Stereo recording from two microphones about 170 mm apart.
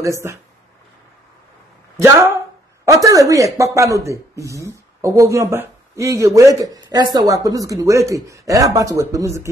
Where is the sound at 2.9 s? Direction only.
20° right (ahead or behind).